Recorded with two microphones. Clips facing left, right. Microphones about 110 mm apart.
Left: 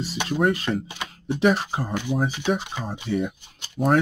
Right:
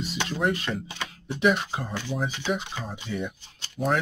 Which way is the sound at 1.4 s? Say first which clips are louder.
Left 2 dB; 35° left (ahead or behind).